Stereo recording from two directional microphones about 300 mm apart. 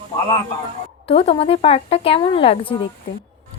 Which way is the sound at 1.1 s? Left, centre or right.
Centre.